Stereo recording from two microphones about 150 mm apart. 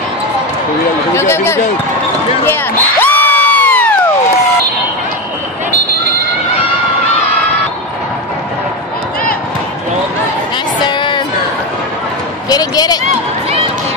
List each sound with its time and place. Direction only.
1.1 s speech: 15° left (ahead or behind)
2.4 s crowd: 15° left (ahead or behind)
10.9 s music: 30° left (ahead or behind)
12.4 s basketball bounce: 25° left (ahead or behind)